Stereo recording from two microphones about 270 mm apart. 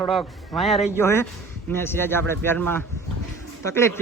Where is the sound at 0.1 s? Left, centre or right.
Centre.